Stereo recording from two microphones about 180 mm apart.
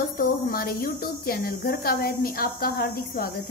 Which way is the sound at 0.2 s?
55° left (ahead or behind).